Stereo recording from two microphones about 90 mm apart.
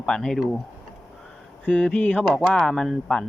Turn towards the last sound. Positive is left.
turn(degrees=5)  # may be behind; listen again after turning